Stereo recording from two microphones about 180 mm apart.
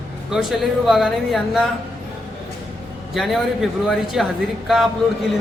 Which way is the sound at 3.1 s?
Centre (ahead or behind).